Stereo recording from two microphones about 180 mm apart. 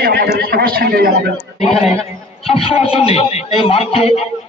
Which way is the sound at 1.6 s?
Centre (ahead or behind).